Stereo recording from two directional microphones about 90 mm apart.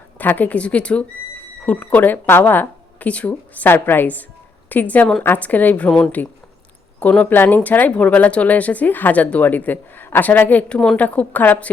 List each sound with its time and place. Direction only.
0.2 s speech: 20° left (ahead or behind)